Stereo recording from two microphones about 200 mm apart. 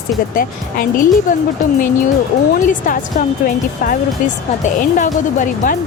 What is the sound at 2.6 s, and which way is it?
Speech, 40° left (ahead or behind).